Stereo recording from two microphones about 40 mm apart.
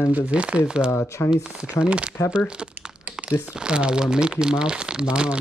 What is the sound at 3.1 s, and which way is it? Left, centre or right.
Crumpling, right.